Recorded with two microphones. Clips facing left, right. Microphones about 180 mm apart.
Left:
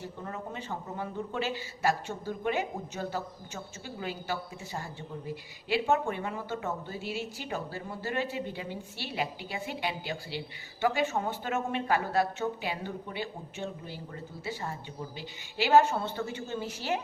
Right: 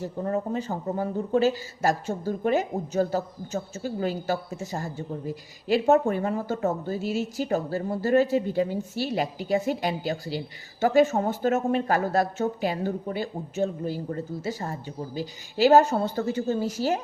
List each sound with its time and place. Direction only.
0.0 s a man's voice: 40° right (ahead or behind)